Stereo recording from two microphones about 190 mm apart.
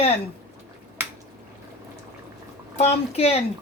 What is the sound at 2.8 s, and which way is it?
Speech, 35° left (ahead or behind).